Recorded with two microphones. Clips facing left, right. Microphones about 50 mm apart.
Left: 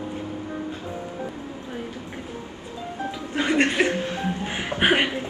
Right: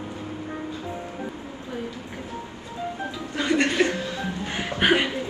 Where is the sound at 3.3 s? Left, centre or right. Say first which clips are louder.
Left 1 dB; left.